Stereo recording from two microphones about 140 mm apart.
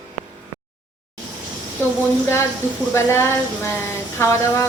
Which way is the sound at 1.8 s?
15° left (ahead or behind).